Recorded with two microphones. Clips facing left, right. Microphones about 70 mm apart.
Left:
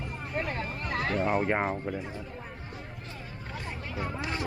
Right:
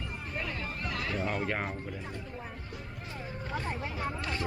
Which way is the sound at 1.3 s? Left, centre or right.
Left.